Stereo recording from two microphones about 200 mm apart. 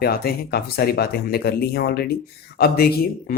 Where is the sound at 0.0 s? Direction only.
50° left (ahead or behind).